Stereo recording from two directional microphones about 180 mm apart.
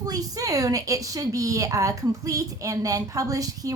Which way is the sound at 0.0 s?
20° right (ahead or behind).